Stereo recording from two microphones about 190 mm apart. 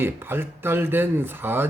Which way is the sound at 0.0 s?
10° right (ahead or behind).